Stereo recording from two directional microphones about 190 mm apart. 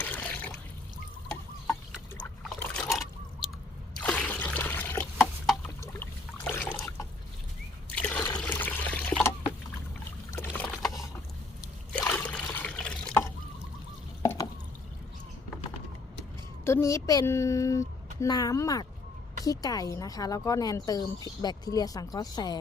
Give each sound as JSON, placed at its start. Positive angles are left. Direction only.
{"t": 0.0, "sound": "water", "side_deg": 10}
{"t": 2.4, "sound": "liquid", "side_deg": 5}
{"t": 4.0, "sound": "trickle", "side_deg": 10}
{"t": 5.8, "sound": "a sound", "side_deg": 10}
{"t": 7.9, "sound": "trickle", "side_deg": 5}
{"t": 8.4, "sound": "water", "side_deg": 10}
{"t": 10.3, "sound": "boat", "side_deg": 10}
{"t": 10.7, "sound": "boat", "side_deg": 0}
{"t": 11.9, "sound": "trickle", "side_deg": 5}
{"t": 14.2, "sound": "drip", "side_deg": 20}
{"t": 16.6, "sound": "speech", "side_deg": 15}